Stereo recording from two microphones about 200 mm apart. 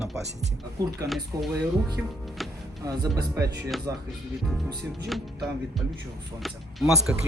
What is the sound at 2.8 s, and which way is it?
Speech, 20° right (ahead or behind).